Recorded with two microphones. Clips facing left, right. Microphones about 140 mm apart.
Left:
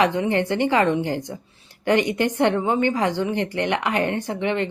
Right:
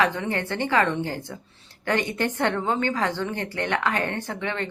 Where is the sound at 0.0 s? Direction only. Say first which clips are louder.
Left 5 dB; 15° left (ahead or behind).